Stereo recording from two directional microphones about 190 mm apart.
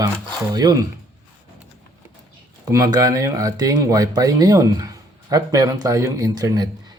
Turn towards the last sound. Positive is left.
turn(degrees=-20)  # may be behind; listen again after turning